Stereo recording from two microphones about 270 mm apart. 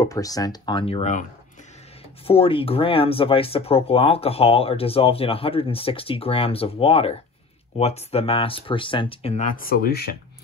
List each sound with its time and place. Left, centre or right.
0.0 s speech: centre
2.2 s speech: left